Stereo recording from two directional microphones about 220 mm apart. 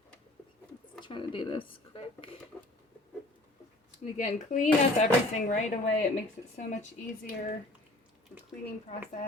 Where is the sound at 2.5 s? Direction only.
5° left (ahead or behind).